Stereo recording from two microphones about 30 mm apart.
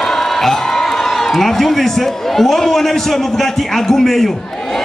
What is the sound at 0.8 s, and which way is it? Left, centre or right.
A man's voice, centre.